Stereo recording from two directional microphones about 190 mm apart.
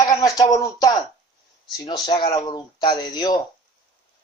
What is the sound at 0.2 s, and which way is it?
Speech, 20° left (ahead or behind).